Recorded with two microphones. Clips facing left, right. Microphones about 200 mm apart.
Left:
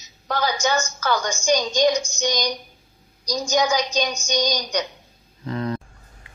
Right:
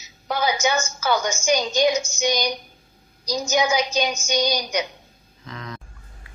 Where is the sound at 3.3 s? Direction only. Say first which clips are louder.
Even; 10° right (ahead or behind).